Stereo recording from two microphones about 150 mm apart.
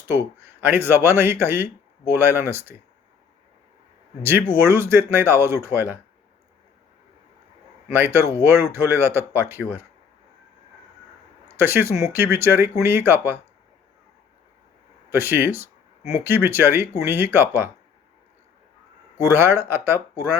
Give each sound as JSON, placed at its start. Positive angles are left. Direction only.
{"t": 0.1, "sound": "speech", "side_deg": -15}
{"t": 4.2, "sound": "speech", "side_deg": -15}
{"t": 7.9, "sound": "speech", "side_deg": -15}
{"t": 11.4, "sound": "speech", "side_deg": -15}
{"t": 15.1, "sound": "speech", "side_deg": -15}
{"t": 19.2, "sound": "speech", "side_deg": -15}